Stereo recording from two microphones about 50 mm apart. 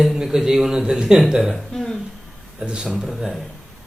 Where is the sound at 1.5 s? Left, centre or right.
Centre.